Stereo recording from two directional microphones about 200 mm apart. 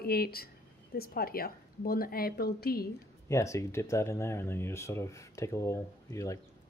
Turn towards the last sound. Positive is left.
turn(degrees=15)  # may be behind; listen again after turning